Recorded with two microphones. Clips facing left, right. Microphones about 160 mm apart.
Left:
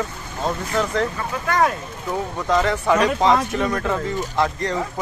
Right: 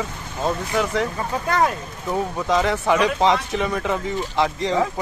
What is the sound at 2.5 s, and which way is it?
Speech, 15° right (ahead or behind).